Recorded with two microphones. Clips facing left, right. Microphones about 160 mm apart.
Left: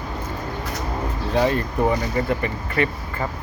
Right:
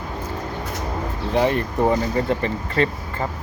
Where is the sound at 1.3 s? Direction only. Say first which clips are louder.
Right 1 dB; 20° right (ahead or behind).